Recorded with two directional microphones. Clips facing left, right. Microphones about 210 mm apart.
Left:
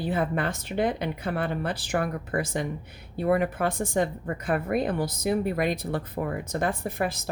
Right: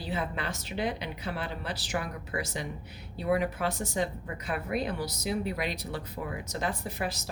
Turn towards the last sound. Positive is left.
turn(degrees=55)  # may be behind; listen again after turning